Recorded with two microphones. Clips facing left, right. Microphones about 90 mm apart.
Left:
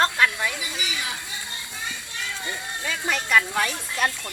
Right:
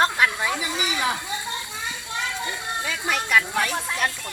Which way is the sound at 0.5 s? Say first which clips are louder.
Right 5 dB; 40° right (ahead or behind).